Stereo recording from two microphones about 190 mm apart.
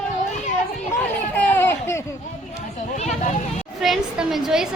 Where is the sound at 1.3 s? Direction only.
10° left (ahead or behind).